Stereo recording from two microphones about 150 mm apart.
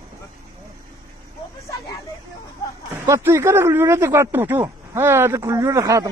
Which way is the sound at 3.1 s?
15° right (ahead or behind).